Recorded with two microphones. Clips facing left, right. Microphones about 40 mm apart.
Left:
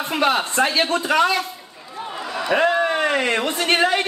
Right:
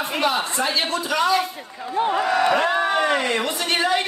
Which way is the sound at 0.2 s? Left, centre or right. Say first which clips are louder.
Left 3 dB; left.